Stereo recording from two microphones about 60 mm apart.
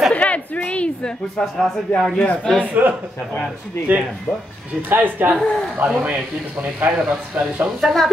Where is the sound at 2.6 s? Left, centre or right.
Right.